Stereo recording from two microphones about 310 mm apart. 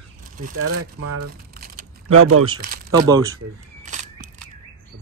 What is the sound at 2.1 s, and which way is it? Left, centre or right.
Speech, right.